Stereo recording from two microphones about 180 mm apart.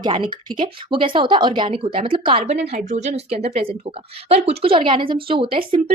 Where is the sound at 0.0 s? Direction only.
25° right (ahead or behind).